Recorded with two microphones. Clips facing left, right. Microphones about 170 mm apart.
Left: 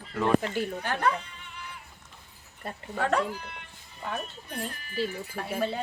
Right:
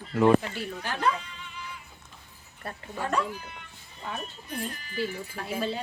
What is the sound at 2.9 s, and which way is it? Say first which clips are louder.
Speech: left 3 dB; 70° left (ahead or behind).